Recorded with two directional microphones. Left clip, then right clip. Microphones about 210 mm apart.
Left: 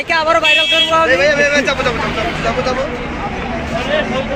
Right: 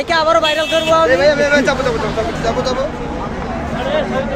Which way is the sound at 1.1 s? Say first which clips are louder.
Even; 60° right (ahead or behind).